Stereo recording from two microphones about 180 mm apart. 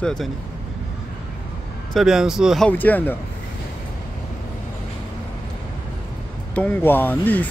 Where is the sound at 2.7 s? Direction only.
10° left (ahead or behind).